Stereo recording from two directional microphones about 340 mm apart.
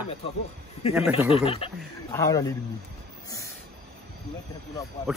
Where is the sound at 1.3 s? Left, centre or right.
Centre.